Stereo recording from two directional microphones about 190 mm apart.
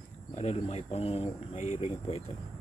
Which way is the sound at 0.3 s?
35° left (ahead or behind).